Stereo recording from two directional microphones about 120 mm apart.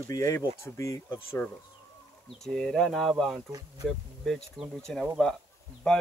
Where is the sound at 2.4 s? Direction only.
5° left (ahead or behind).